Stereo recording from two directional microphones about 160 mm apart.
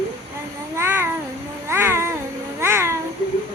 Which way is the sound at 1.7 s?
15° right (ahead or behind).